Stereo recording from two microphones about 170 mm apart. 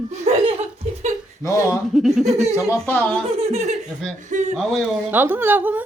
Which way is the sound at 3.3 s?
35° right (ahead or behind).